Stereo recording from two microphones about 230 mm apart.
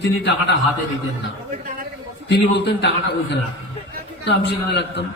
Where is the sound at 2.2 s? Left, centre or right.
Left.